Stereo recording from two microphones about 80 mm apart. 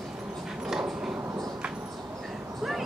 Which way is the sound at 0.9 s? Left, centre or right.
Centre.